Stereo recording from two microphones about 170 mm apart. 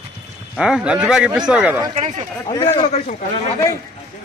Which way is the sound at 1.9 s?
45° right (ahead or behind).